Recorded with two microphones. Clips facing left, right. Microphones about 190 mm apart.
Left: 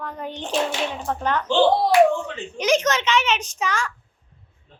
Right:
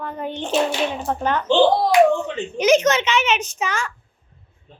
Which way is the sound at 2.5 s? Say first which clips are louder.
Right 4 dB; 5° right (ahead or behind).